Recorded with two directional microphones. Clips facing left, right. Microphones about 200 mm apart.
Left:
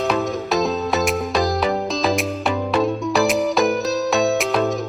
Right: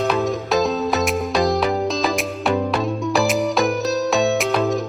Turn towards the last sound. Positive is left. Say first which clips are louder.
# even
turn(degrees=0)  # may be behind; listen again after turning